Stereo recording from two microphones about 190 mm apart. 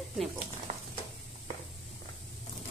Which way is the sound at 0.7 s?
40° right (ahead or behind).